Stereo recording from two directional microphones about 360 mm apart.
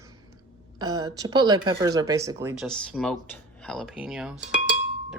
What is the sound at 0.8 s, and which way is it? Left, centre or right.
Speech, centre.